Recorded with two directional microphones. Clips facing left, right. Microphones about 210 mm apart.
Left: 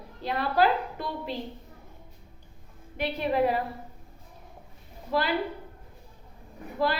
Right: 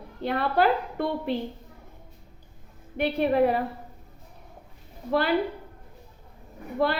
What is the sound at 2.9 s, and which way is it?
Speech, 55° right (ahead or behind).